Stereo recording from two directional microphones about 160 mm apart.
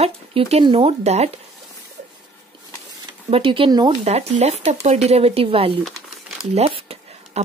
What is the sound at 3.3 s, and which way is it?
Speech, 35° right (ahead or behind).